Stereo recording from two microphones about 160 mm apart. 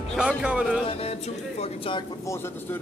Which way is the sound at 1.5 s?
35° left (ahead or behind).